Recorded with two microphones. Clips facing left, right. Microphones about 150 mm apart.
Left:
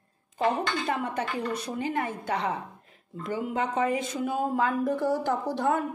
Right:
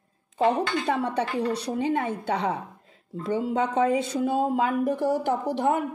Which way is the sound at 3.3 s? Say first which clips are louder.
Right 4 dB; 25° right (ahead or behind).